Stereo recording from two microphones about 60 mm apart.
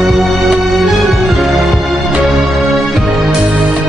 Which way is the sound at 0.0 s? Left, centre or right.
Centre.